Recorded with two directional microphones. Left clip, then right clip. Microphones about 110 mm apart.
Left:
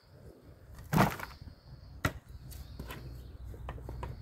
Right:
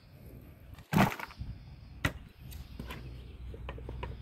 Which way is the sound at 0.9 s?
25° right (ahead or behind).